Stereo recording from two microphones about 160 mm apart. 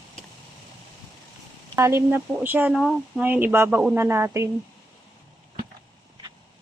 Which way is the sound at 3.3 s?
10° right (ahead or behind).